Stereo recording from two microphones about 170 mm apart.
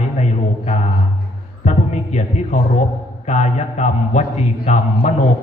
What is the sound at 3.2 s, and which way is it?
A man's voice, 40° left (ahead or behind).